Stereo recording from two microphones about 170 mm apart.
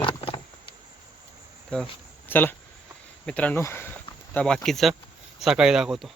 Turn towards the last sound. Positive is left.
turn(degrees=0)  # may be behind; listen again after turning